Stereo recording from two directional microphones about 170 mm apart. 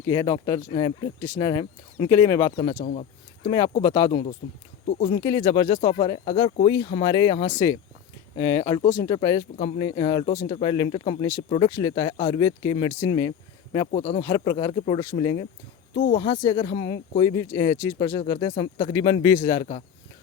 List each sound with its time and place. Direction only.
0.0 s speech: 20° left (ahead or behind)
2.6 s speech: 30° left (ahead or behind)
2.8 s speech: 40° left (ahead or behind)
3.8 s speech: 25° left (ahead or behind)
13.9 s speech: 35° left (ahead or behind)
14.2 s speech: 20° left (ahead or behind)
14.7 s speech: 30° left (ahead or behind)